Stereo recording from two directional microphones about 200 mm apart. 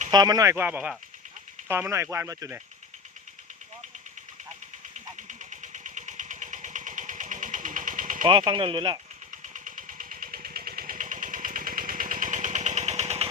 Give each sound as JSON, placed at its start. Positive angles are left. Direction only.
{"t": 0.1, "sound": "speech", "side_deg": -20}
{"t": 5.1, "sound": "engine", "side_deg": -40}
{"t": 8.2, "sound": "speech", "side_deg": -20}
{"t": 9.3, "sound": "engine", "side_deg": -40}